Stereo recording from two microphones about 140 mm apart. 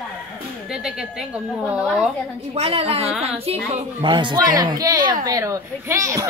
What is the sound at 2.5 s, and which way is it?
A woman's voice, 45° right (ahead or behind).